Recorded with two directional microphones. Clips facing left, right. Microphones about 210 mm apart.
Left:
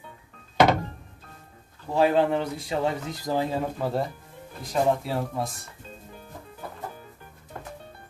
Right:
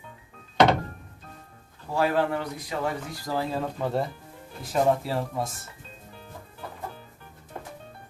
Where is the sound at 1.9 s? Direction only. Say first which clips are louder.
Left 3 dB; 20° left (ahead or behind).